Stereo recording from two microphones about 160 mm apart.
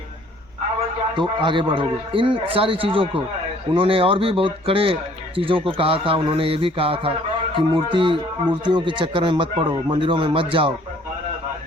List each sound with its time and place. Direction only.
1.1 s a man's voice: 30° right (ahead or behind)